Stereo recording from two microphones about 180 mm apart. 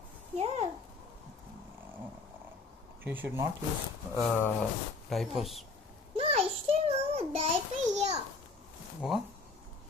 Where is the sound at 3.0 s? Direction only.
10° right (ahead or behind).